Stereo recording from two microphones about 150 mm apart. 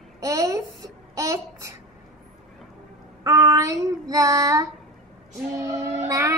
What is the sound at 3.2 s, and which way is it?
Child singing, 25° right (ahead or behind).